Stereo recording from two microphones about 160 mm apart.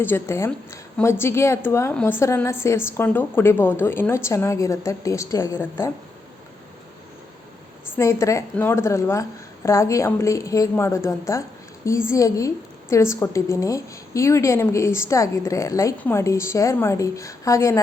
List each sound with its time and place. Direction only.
0.0 s a woman's voice: 15° left (ahead or behind)
7.9 s a woman's voice: 20° left (ahead or behind)